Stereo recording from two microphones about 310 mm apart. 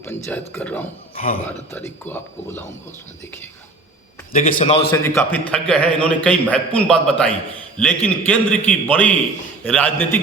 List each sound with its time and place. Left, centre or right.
0.0 s speech: centre
1.1 s speech: left
1.7 s speech: centre
4.3 s a man's voice: left
5.0 s a man's voice: centre